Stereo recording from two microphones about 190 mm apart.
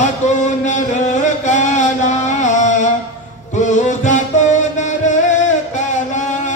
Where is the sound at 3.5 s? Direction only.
40° left (ahead or behind).